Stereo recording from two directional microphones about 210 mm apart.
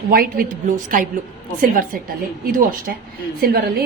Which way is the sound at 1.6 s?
40° right (ahead or behind).